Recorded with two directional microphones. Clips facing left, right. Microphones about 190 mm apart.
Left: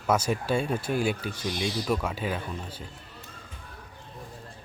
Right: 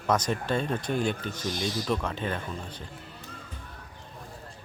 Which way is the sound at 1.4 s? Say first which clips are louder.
Left 1 dB; 45° right (ahead or behind).